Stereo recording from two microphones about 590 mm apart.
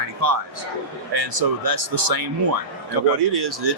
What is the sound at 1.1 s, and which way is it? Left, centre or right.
Speech, right.